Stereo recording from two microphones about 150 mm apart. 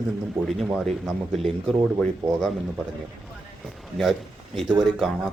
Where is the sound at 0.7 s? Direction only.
Centre (ahead or behind).